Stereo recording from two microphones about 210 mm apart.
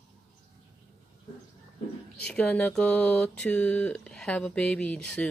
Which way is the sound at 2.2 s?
5° left (ahead or behind).